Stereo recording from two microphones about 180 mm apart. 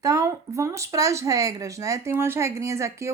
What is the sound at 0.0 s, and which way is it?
Speech, 20° right (ahead or behind).